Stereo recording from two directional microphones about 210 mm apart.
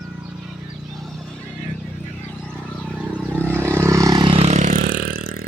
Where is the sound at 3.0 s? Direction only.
5° right (ahead or behind).